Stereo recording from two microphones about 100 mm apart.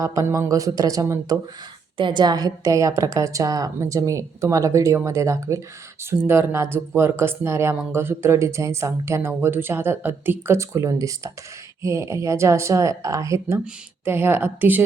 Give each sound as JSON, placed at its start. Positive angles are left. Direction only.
{"t": 0.0, "sound": "a woman's voice", "side_deg": -35}
{"t": 2.0, "sound": "a woman's voice", "side_deg": -50}